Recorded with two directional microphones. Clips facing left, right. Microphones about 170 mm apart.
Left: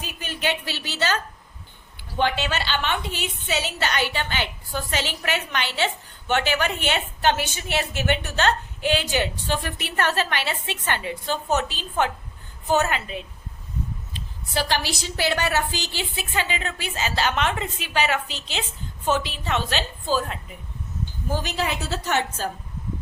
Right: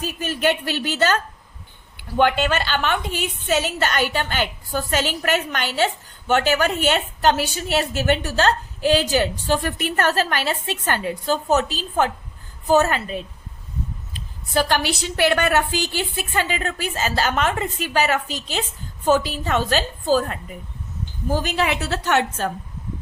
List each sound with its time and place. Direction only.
0.0 s a woman's voice: 45° right (ahead or behind)
21.4 s a woman's voice: 65° right (ahead or behind)